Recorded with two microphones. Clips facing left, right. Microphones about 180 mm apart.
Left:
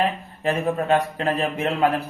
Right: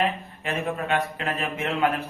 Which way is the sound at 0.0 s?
35° left (ahead or behind).